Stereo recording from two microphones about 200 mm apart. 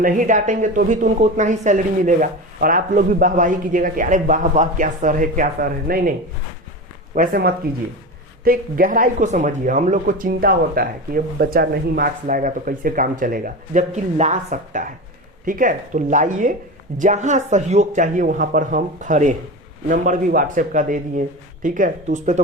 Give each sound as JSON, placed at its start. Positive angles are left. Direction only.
{"t": 0.0, "sound": "speech", "side_deg": -40}